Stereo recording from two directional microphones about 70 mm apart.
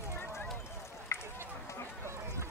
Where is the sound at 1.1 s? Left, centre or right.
Left.